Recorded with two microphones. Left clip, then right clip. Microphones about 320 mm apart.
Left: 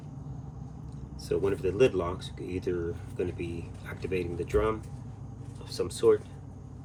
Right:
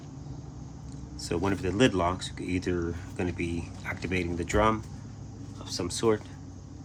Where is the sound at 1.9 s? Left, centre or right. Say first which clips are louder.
Right 4 dB; right.